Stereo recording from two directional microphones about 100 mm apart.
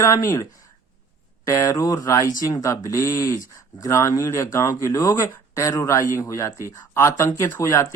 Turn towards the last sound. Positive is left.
turn(degrees=30)  # may be behind; listen again after turning